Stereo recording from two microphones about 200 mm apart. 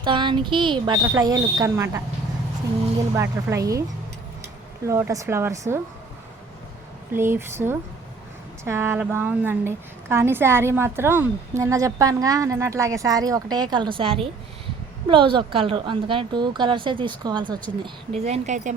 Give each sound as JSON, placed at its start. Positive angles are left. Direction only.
{"t": 0.0, "sound": "a woman's voice", "side_deg": -25}
{"t": 3.2, "sound": "a woman's voice", "side_deg": -15}
{"t": 4.9, "sound": "a woman's voice", "side_deg": -15}
{"t": 7.1, "sound": "a woman's voice", "side_deg": -10}